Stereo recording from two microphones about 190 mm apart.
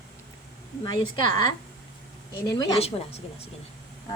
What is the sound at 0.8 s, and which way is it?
A woman's voice, 20° left (ahead or behind).